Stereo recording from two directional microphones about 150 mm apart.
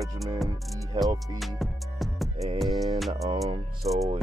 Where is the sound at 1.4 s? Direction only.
Centre (ahead or behind).